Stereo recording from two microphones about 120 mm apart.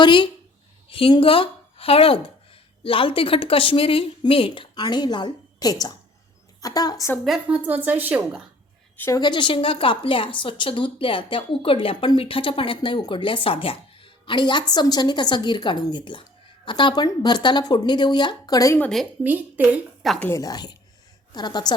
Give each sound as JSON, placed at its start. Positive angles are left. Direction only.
{"t": 0.0, "sound": "a woman's voice", "side_deg": 40}
{"t": 7.3, "sound": "a woman's voice", "side_deg": -5}
{"t": 9.0, "sound": "a woman's voice", "side_deg": 25}
{"t": 9.2, "sound": "a woman's voice", "side_deg": 40}
{"t": 18.8, "sound": "speech", "side_deg": 5}
{"t": 19.2, "sound": "a woman's voice", "side_deg": -15}
{"t": 20.1, "sound": "speech", "side_deg": 15}
{"t": 20.4, "sound": "speech", "side_deg": 35}